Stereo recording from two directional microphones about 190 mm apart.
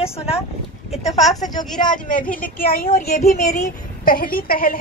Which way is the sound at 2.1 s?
45° left (ahead or behind).